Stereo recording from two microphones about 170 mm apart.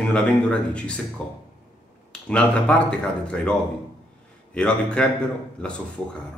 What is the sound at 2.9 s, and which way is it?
Speech, 5° left (ahead or behind).